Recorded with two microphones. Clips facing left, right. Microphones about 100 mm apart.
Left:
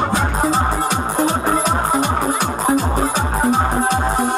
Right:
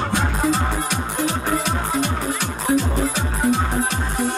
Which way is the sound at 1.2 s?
45° left (ahead or behind).